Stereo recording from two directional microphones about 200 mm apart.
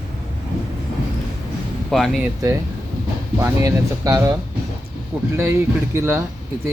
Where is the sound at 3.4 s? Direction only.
15° right (ahead or behind).